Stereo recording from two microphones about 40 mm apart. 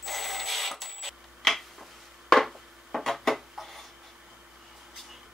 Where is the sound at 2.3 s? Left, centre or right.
Centre.